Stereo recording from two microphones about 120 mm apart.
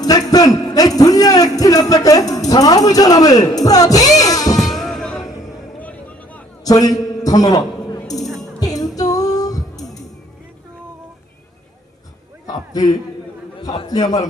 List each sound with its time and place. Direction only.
0.0 s a sound: 30° left (ahead or behind)
4.5 s music: centre (ahead or behind)
5.8 s vehicle: 15° left (ahead or behind)
6.7 s a man's voice: 30° left (ahead or behind)
7.3 s a sound: 30° left (ahead or behind)
8.2 s music: centre (ahead or behind)
8.6 s music: 30° left (ahead or behind)
12.7 s a man's voice: 30° left (ahead or behind)